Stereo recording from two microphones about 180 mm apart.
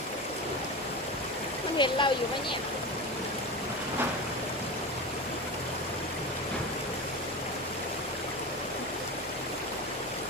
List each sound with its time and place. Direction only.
1.8 s speech: 25° left (ahead or behind)